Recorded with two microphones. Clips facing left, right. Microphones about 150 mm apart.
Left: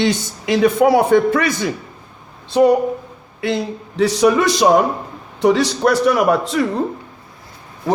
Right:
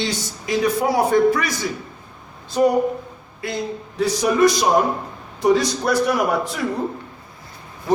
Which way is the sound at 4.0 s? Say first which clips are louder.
Left 3 dB; 75° left (ahead or behind).